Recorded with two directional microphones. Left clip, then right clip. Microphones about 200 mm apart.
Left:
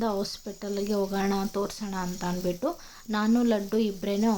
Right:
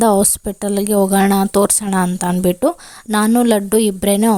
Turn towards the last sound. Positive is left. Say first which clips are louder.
# right 13 dB
turn(degrees=-55)  # may be behind; listen again after turning